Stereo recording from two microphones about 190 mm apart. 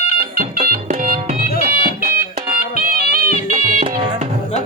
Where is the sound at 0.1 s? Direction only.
50° right (ahead or behind).